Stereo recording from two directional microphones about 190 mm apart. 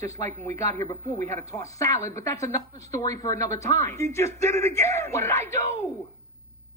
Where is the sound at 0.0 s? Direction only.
15° left (ahead or behind).